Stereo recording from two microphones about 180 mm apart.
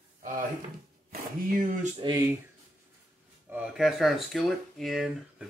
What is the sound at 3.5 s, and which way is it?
Speech, 5° right (ahead or behind).